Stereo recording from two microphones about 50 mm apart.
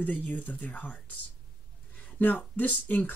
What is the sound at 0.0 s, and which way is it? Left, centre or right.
Speech, left.